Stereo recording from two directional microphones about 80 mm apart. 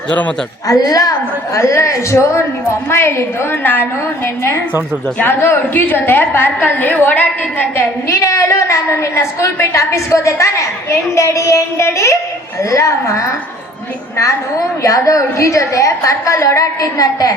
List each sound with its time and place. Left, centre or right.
0.7 s a woman's voice: left
1.5 s a woman's voice: left
5.2 s a woman's voice: left
8.1 s a woman's voice: left
14.8 s a woman's voice: left